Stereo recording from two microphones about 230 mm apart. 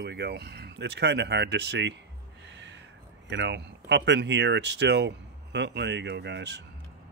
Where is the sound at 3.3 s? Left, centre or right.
Right.